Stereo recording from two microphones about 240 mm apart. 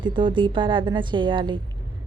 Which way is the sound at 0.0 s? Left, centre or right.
Centre.